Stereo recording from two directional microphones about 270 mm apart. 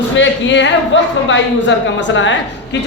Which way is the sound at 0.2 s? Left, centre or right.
Left.